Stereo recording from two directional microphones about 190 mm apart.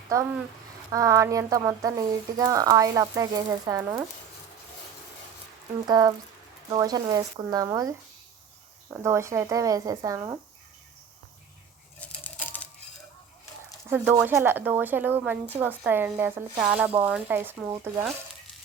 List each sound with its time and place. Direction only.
0.1 s speech: 15° right (ahead or behind)
5.9 s speech: 20° right (ahead or behind)
11.9 s a sound: 10° left (ahead or behind)
13.9 s speech: 10° right (ahead or behind)